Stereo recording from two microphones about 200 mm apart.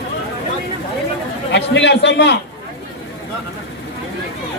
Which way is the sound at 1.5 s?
60° left (ahead or behind).